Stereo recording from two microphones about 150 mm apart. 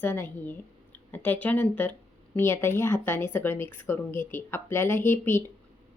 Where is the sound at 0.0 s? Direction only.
15° left (ahead or behind).